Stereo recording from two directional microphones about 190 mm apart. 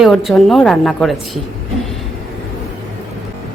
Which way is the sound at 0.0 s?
Centre (ahead or behind).